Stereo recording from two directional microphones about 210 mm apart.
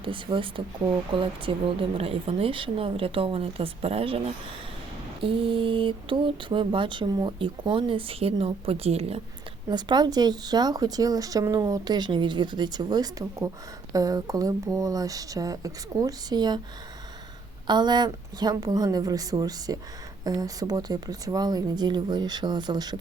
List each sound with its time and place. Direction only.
0.0 s speech: 25° right (ahead or behind)
17.7 s speech: 20° right (ahead or behind)